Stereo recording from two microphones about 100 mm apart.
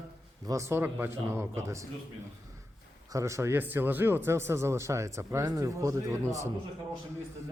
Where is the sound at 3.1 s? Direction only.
30° right (ahead or behind).